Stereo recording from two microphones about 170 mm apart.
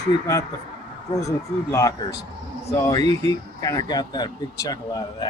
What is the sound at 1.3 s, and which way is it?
Speech, 20° left (ahead or behind).